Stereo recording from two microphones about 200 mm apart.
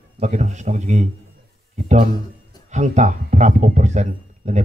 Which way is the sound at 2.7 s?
35° right (ahead or behind).